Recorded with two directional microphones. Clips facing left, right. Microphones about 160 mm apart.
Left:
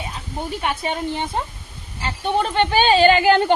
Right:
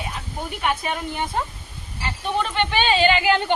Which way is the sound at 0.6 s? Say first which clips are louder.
Even; 30° left (ahead or behind).